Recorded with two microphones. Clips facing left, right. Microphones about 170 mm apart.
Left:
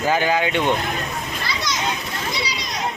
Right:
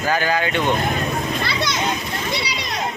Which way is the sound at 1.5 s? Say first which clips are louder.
Right 3 dB; 65° right (ahead or behind).